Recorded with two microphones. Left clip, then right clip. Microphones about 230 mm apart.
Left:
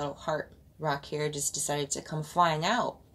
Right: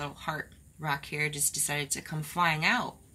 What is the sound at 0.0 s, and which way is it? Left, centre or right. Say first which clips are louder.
Speech: left 3 dB; right.